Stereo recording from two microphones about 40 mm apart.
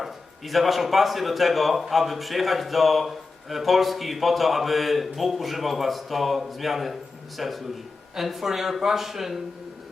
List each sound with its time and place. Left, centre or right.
0.0 s speech: centre